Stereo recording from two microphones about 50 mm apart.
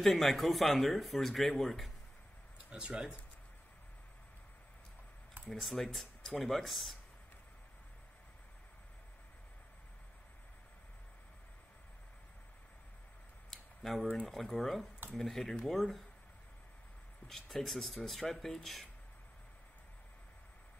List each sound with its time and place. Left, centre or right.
0.0 s speech: centre
2.7 s speech: centre
5.5 s speech: centre
13.5 s a sound: centre
14.2 s speech: centre
17.3 s speech: centre